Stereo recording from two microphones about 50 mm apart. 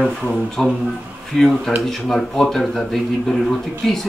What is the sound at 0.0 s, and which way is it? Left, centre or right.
Speech, centre.